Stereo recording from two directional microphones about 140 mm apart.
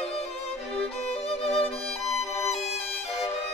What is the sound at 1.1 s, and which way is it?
Music, 50° left (ahead or behind).